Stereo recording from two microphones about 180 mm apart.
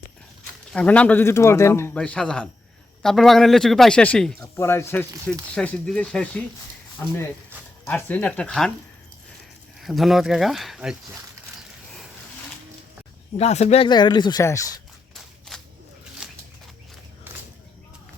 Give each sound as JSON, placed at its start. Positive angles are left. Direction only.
{"t": 0.7, "sound": "a man's voice", "side_deg": 5}
{"t": 9.8, "sound": "a man's voice", "side_deg": 0}
{"t": 13.3, "sound": "speech", "side_deg": 35}
{"t": 16.2, "sound": "a sound", "side_deg": -5}